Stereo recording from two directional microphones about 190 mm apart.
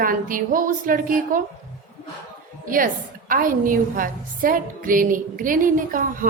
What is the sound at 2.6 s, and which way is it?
A woman's voice, 45° right (ahead or behind).